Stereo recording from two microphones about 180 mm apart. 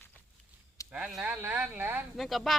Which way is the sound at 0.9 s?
5° right (ahead or behind).